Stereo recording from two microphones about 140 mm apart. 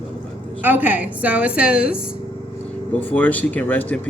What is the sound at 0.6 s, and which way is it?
A woman's voice, 15° right (ahead or behind).